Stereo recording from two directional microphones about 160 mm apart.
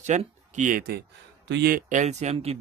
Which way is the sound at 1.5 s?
80° right.